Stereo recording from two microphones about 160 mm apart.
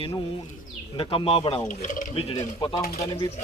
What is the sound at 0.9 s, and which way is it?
Speech, 35° left (ahead or behind).